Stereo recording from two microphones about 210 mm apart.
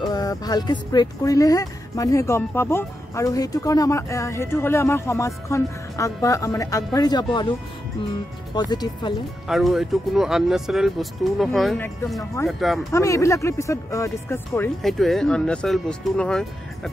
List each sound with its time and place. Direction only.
0.1 s speech: 15° left (ahead or behind)
8.5 s speech: 20° left (ahead or behind)
9.5 s speech: centre (ahead or behind)
12.9 s speech: 15° left (ahead or behind)
14.8 s speech: centre (ahead or behind)